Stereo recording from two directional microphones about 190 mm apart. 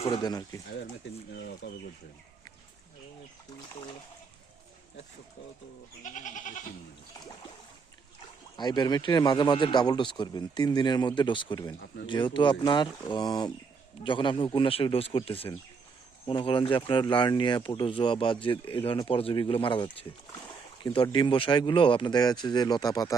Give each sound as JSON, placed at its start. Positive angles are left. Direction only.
{"t": 0.0, "sound": "speech", "side_deg": 20}
{"t": 1.3, "sound": "speech", "side_deg": 60}
{"t": 6.0, "sound": "goat", "side_deg": 40}
{"t": 8.5, "sound": "speech", "side_deg": 20}